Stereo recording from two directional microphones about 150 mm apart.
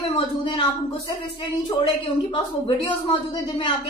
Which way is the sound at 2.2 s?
35° left (ahead or behind).